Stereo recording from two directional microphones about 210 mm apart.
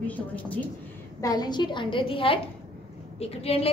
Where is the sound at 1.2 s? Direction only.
20° left (ahead or behind).